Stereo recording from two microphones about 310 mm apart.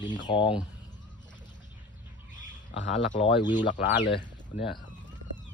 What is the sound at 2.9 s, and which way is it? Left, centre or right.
Speech, centre.